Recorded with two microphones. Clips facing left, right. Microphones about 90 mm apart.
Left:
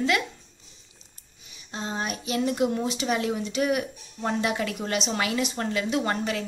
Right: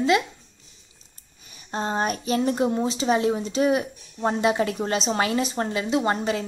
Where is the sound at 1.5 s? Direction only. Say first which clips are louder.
Right 6 dB; 45° right (ahead or behind); by 6.4 s 25° right (ahead or behind).